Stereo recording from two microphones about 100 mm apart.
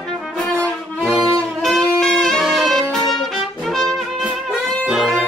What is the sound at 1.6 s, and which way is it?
Saxophone, 5° left (ahead or behind).